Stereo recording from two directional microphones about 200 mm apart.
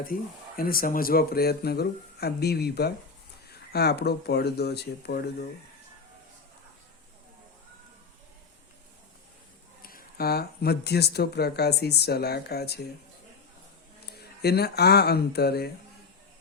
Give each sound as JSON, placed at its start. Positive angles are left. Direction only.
{"t": 0.0, "sound": "speech", "side_deg": 45}
{"t": 9.8, "sound": "speech", "side_deg": 45}
{"t": 14.2, "sound": "speech", "side_deg": 55}